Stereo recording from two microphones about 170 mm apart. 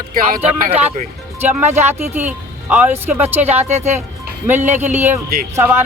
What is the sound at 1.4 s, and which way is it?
Speech, 10° right (ahead or behind).